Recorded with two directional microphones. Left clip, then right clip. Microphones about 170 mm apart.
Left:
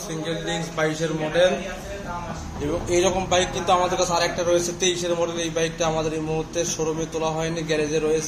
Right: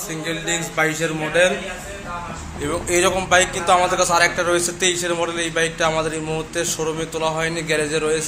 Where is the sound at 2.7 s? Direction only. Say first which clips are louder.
Right 3 dB; centre (ahead or behind).